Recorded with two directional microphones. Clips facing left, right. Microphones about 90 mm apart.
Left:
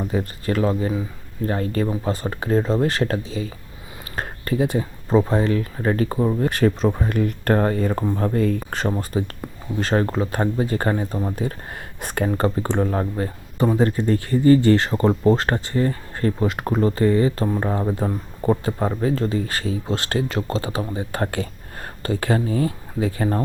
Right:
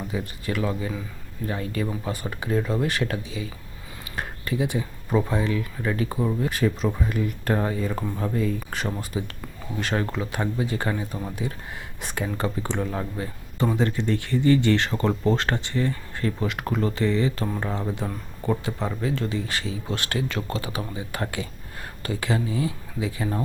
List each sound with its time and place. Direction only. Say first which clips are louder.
0.1 s speech: left 6 dB; 45° left (ahead or behind)
4.1 s a sound: left 4 dB; 45° left (ahead or behind)
5.3 s speech: left 5 dB; 50° left (ahead or behind); by 11.4 s 30° left (ahead or behind)
11.4 s speech: left 4 dB; 50° left (ahead or behind)
19.9 s speech: left 3 dB; 30° left (ahead or behind)
20.6 s speech: left 5 dB; 35° left (ahead or behind)